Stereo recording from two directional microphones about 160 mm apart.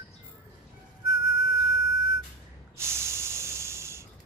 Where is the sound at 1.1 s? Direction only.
90° left.